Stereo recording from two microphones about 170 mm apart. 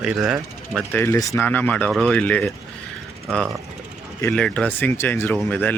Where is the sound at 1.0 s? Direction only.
15° left (ahead or behind).